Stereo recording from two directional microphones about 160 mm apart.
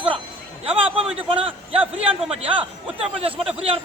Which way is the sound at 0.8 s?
35° right (ahead or behind).